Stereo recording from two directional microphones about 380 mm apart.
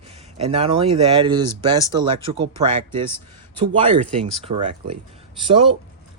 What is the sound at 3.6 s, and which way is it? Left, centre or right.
Speech, centre.